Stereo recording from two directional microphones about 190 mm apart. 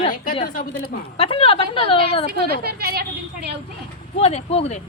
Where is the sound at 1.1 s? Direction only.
30° left (ahead or behind).